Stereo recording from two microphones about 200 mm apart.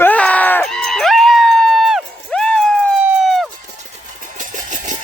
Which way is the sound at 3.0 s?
Centre (ahead or behind).